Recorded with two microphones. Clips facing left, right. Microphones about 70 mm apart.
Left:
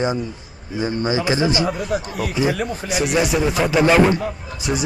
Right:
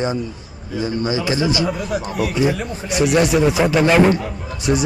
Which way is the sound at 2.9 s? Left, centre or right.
Centre.